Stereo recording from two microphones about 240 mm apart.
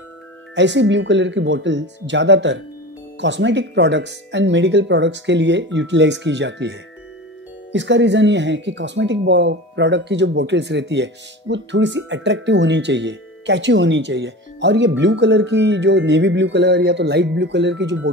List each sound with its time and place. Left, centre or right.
0.6 s speech: right